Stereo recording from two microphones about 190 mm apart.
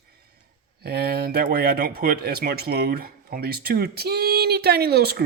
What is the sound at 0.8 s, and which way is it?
Speech, 55° right (ahead or behind).